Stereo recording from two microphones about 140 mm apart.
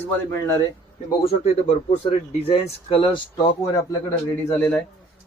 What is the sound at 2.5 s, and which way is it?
Speech, 40° left (ahead or behind).